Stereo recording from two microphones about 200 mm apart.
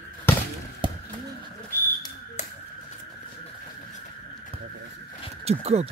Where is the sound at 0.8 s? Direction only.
25° right (ahead or behind).